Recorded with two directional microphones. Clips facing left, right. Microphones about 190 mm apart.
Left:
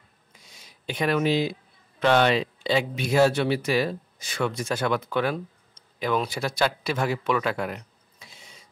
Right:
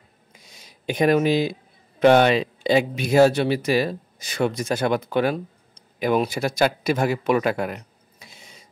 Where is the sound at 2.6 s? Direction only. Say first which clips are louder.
Right 5 dB; 45° right (ahead or behind).